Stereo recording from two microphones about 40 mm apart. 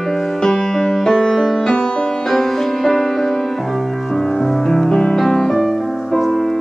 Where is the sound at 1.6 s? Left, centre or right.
Centre.